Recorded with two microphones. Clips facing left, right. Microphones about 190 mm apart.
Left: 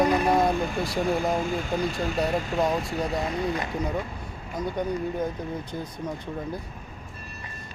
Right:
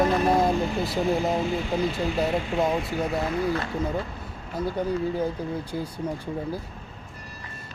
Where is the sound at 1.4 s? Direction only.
45° left (ahead or behind).